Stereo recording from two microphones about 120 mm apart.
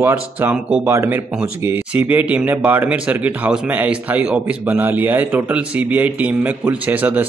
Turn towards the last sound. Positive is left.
turn(degrees=-15)  # may be behind; listen again after turning